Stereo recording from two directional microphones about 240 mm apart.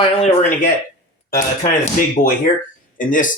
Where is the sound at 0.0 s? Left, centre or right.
Left.